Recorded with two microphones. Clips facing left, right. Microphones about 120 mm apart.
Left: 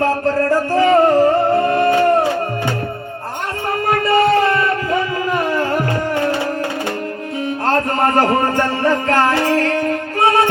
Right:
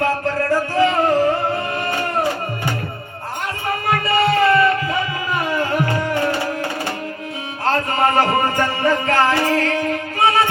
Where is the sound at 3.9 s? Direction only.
40° left (ahead or behind).